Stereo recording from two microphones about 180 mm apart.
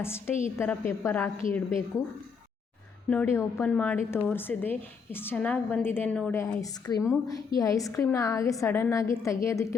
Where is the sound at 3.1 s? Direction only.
10° left (ahead or behind).